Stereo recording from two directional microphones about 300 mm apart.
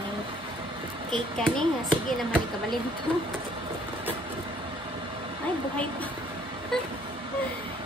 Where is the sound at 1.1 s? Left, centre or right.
Centre.